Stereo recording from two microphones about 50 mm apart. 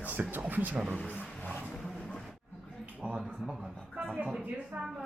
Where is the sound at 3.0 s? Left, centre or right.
Centre.